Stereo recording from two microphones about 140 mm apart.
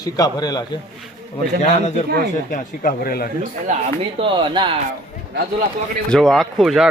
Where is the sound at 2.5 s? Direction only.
85° left.